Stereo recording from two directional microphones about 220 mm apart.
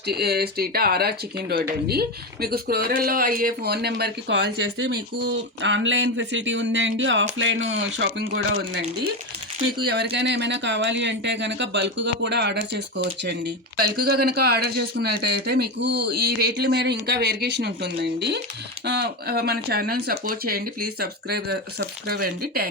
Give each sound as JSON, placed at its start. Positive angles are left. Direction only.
{"t": 0.1, "sound": "speech", "side_deg": -45}
{"t": 9.8, "sound": "speech", "side_deg": -50}
{"t": 14.1, "sound": "speech", "side_deg": -45}